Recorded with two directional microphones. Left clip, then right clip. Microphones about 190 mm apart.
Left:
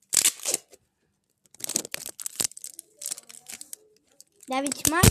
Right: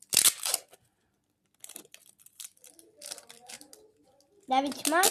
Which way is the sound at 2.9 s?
40° left (ahead or behind).